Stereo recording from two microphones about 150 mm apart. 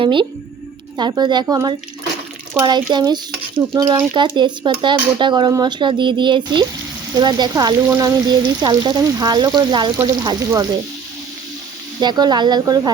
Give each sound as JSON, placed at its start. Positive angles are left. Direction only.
{"t": 0.0, "sound": "speech", "side_deg": -35}
{"t": 11.9, "sound": "speech", "side_deg": -30}